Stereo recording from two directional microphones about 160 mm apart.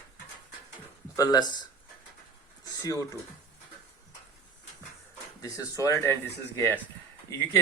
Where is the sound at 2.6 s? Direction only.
20° left (ahead or behind).